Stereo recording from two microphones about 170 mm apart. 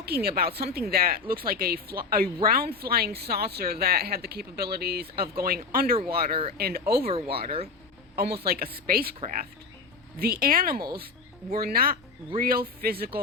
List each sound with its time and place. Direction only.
0.0 s speech: 65° right (ahead or behind)
7.1 s speech: 35° right (ahead or behind)
8.1 s speech: 65° right (ahead or behind)